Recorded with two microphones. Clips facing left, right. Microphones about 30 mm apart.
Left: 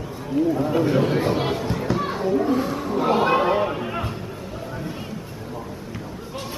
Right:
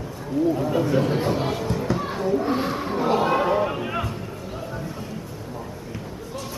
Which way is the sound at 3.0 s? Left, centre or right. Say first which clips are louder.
Left 2 dB; left.